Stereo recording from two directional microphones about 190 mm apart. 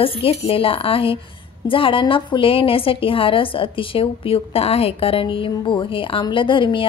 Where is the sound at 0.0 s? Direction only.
30° left (ahead or behind).